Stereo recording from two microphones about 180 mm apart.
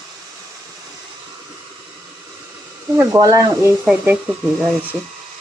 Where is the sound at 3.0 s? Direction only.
20° right (ahead or behind).